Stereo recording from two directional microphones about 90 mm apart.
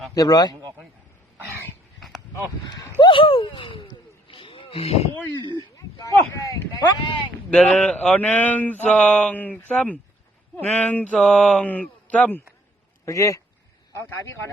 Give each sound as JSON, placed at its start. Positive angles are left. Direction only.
{"t": 0.1, "sound": "a man's voice", "side_deg": 45}
{"t": 2.0, "sound": "a sound", "side_deg": 0}
{"t": 2.3, "sound": "speech", "side_deg": 40}
{"t": 3.0, "sound": "a sound", "side_deg": 70}
{"t": 5.7, "sound": "speech", "side_deg": 40}
{"t": 7.0, "sound": "speech", "side_deg": 65}
{"t": 7.5, "sound": "speech", "side_deg": 5}
{"t": 11.2, "sound": "mantra", "side_deg": 5}
{"t": 11.6, "sound": "speech", "side_deg": 15}
{"t": 13.1, "sound": "speech", "side_deg": 35}